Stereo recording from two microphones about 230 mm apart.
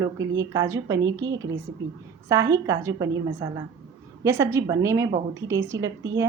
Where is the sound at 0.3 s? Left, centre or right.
Centre.